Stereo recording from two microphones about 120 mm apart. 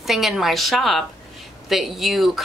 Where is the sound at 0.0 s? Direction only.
Centre (ahead or behind).